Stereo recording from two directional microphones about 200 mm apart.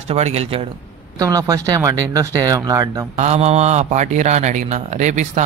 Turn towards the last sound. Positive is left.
turn(degrees=-35)  # may be behind; listen again after turning